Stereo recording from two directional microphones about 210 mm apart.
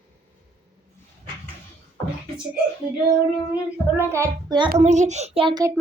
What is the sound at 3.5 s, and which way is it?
Speech, 10° right (ahead or behind).